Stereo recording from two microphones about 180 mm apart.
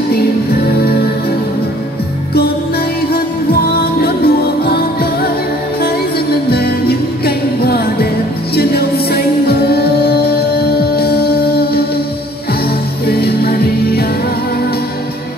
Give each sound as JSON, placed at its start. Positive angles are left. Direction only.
{"t": 3.7, "sound": "music", "side_deg": 60}
{"t": 6.5, "sound": "music", "side_deg": 60}
{"t": 13.0, "sound": "music", "side_deg": 60}